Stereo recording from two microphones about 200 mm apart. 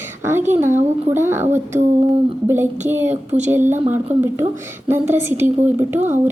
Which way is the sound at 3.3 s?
35° right (ahead or behind).